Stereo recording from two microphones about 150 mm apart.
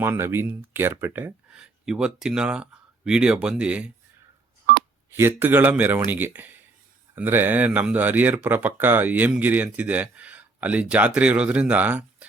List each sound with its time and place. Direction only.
0.0 s speech: 15° right (ahead or behind)
4.7 s telephone dialing: 75° right (ahead or behind)
5.1 s speech: 15° right (ahead or behind)